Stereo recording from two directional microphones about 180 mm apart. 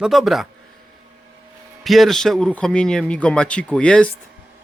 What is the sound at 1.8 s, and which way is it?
Speech, centre (ahead or behind).